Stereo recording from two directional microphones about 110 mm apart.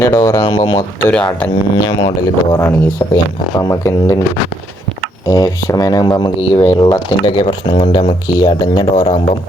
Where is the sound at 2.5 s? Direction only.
20° left (ahead or behind).